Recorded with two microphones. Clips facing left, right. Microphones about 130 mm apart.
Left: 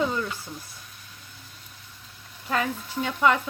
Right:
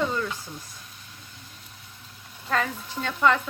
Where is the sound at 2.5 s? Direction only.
10° left (ahead or behind).